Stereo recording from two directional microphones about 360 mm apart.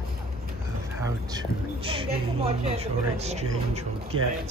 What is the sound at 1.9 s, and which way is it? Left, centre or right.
Speech, centre.